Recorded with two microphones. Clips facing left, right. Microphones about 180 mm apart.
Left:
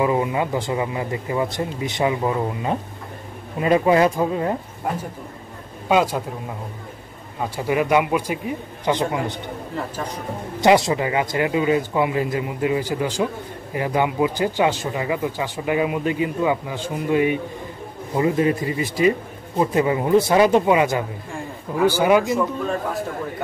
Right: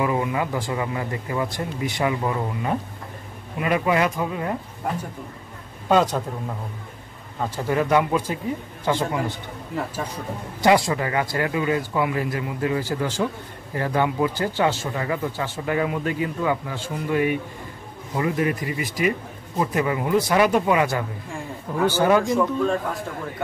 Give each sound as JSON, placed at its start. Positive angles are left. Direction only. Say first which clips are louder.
{"t": 0.0, "sound": "speech", "louder": "left 3 dB", "side_deg": 25}
{"t": 5.9, "sound": "speech", "louder": "even", "side_deg": 10}
{"t": 7.3, "sound": "speech", "louder": "left 2 dB", "side_deg": 10}
{"t": 10.6, "sound": "speech", "louder": "left 2 dB", "side_deg": 20}